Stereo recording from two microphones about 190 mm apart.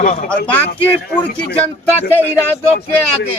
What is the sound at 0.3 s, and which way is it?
Speech, 10° left (ahead or behind).